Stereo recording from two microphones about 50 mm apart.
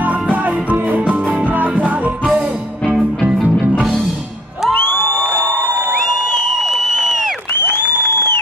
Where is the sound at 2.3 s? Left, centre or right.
Centre.